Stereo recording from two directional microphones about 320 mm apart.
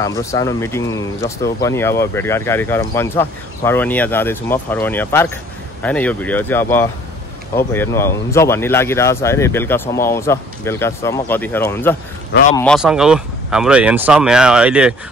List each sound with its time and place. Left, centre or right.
0.0 s speech: centre
12.3 s speech: left
12.5 s speech: centre